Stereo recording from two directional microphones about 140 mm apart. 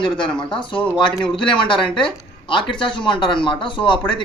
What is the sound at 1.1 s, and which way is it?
Speech, 35° left (ahead or behind).